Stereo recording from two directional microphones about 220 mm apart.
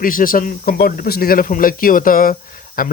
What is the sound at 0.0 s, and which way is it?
Speech, 40° left (ahead or behind).